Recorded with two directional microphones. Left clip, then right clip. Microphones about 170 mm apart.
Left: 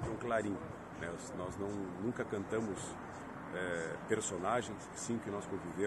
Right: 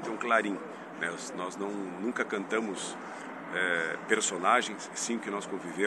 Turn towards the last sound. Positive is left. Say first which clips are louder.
# right 7 dB
turn(degrees=25)  # may be behind; listen again after turning